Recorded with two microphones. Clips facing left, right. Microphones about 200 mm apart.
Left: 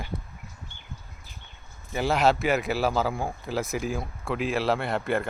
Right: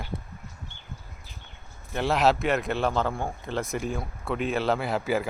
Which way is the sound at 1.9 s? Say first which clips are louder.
Even; centre (ahead or behind).